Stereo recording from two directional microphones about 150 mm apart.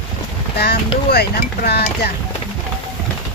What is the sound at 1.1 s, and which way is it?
Speech, 90° left.